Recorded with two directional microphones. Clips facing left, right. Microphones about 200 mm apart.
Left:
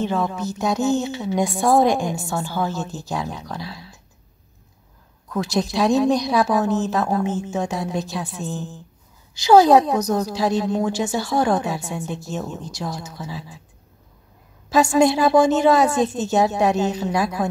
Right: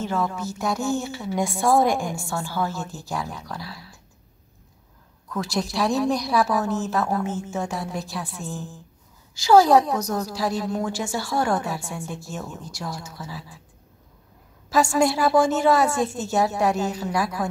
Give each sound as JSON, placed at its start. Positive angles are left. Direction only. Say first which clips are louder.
{"t": 0.0, "sound": "a woman's voice", "louder": "left 3 dB", "side_deg": 20}
{"t": 5.3, "sound": "a woman's voice", "louder": "left 4 dB", "side_deg": 20}
{"t": 14.7, "sound": "a woman's voice", "louder": "left 4 dB", "side_deg": 20}